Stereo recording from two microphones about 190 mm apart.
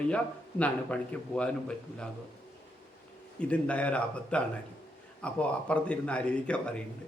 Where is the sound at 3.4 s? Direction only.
5° left (ahead or behind).